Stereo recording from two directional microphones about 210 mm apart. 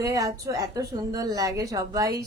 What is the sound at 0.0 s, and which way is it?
A woman's voice, 15° right (ahead or behind).